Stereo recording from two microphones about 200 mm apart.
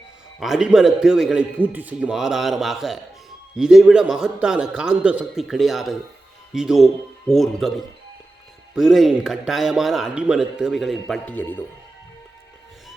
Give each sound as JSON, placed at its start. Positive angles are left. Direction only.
{"t": 0.3, "sound": "a man's voice", "side_deg": 0}